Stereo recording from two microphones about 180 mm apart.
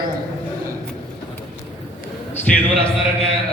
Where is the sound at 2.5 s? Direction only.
5° left (ahead or behind).